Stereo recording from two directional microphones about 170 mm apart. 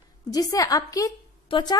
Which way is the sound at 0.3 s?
20° left (ahead or behind).